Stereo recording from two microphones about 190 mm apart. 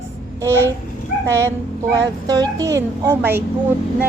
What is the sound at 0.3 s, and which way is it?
Speech, 15° right (ahead or behind).